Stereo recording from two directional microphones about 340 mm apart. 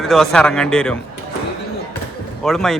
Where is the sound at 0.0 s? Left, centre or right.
Centre.